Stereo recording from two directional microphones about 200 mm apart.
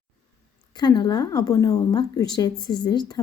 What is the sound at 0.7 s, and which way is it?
A woman's voice, 20° left (ahead or behind).